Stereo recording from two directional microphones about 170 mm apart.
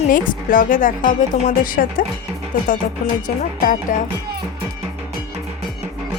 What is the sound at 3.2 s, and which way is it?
Speech, 55° left (ahead or behind).